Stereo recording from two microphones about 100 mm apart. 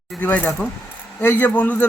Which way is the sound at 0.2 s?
15° left (ahead or behind).